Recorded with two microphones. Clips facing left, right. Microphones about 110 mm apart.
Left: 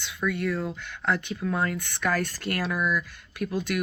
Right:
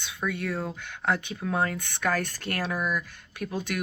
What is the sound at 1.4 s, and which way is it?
Speech, 45° right (ahead or behind).